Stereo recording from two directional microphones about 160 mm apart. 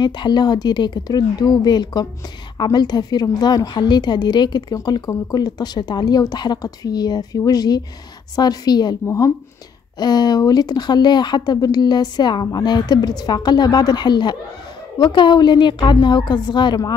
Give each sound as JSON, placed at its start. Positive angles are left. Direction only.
{"t": 0.0, "sound": "a woman's voice", "side_deg": 25}